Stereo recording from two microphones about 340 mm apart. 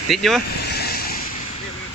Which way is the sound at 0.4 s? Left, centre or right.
Left.